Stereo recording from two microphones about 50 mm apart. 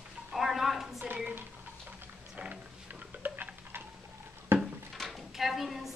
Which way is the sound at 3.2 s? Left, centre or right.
Right.